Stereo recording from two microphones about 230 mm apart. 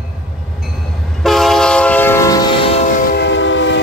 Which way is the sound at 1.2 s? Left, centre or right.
Centre.